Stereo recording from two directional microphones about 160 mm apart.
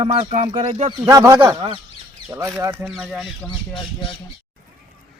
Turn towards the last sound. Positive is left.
turn(degrees=30)  # may be behind; listen again after turning